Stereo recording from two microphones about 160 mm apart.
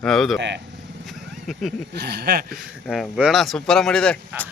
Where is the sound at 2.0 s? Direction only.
90° right.